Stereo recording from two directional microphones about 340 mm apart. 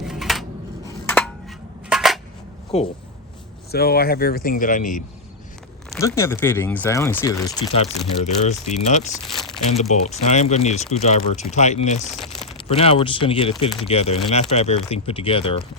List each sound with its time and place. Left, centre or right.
0.0 s scissors: centre
1.0 s a sound: centre
2.7 s speech: centre
5.9 s speech: centre
8.2 s speech: centre
9.2 s crumpling: centre
9.6 s speech: centre